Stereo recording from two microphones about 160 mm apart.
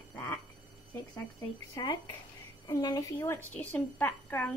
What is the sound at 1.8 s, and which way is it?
A woman's voice, 25° left (ahead or behind).